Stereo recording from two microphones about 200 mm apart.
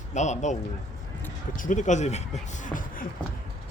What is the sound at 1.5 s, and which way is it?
Speech, 40° left (ahead or behind).